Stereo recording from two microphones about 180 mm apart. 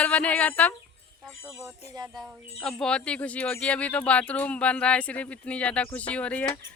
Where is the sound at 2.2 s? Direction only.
Centre (ahead or behind).